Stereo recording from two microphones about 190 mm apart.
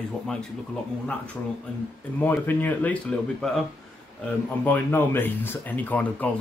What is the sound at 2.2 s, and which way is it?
Speech, 10° left (ahead or behind).